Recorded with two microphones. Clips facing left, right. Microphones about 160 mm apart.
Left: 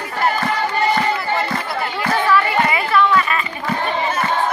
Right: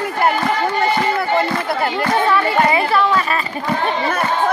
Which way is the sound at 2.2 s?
30° right (ahead or behind).